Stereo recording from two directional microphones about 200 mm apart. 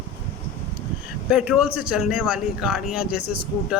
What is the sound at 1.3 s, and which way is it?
A man's voice, 5° right (ahead or behind).